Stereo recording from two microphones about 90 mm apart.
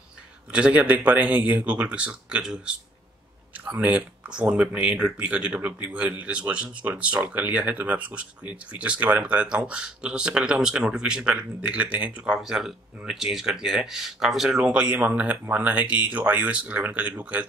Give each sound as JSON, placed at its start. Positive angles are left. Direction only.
{"t": 0.5, "sound": "speech", "side_deg": -15}